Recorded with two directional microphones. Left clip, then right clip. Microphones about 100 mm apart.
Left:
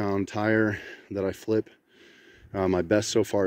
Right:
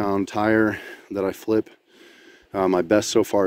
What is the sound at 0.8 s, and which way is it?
Speech, 20° right (ahead or behind).